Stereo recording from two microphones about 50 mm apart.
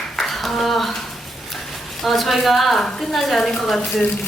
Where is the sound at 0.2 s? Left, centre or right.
Centre.